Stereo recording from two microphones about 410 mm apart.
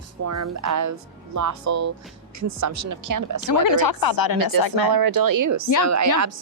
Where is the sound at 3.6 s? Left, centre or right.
Left.